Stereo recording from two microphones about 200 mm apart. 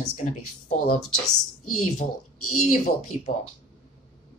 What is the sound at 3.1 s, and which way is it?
Speech, 35° left (ahead or behind).